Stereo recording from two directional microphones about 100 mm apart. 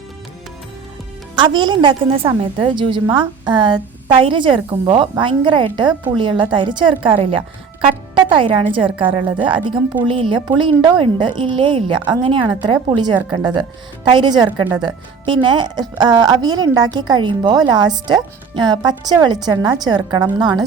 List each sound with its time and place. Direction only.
1.4 s a woman's voice: 50° right (ahead or behind)
8.1 s music: 55° right (ahead or behind)
8.7 s a woman's voice: 60° right (ahead or behind)